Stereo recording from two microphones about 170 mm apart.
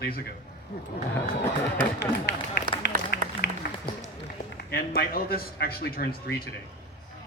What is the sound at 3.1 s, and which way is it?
Applause, 65° left (ahead or behind).